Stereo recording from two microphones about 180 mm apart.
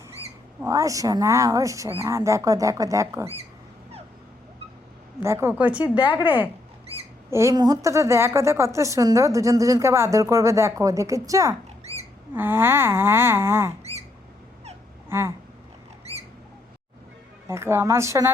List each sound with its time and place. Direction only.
0.6 s a woman's voice: 20° right (ahead or behind)
5.2 s a woman's voice: 15° right (ahead or behind)
11.8 s rodents: 35° right (ahead or behind)
12.3 s a woman's voice: 10° right (ahead or behind)
15.1 s a woman's voice: 15° right (ahead or behind)
16.1 s squawk: 35° right (ahead or behind)
17.5 s a woman's voice: 15° right (ahead or behind)